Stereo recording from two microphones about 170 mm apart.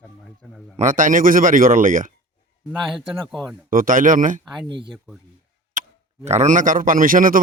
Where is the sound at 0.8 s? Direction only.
50° right (ahead or behind).